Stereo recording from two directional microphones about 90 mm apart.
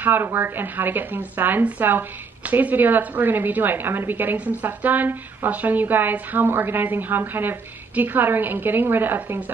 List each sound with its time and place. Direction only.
0.0 s speech: 25° right (ahead or behind)